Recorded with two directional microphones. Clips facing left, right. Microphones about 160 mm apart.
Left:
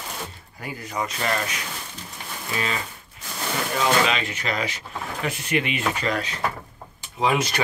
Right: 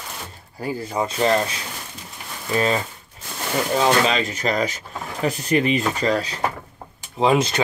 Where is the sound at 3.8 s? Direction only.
35° right (ahead or behind).